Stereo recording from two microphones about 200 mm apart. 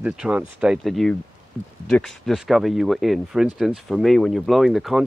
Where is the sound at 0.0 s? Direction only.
5° right (ahead or behind).